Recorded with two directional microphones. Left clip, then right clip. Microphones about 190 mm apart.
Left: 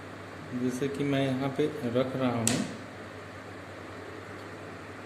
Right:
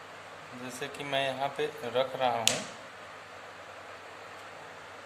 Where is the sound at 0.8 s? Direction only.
20° right (ahead or behind).